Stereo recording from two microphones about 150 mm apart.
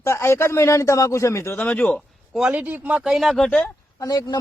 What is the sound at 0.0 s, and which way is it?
A man's voice, 20° left (ahead or behind).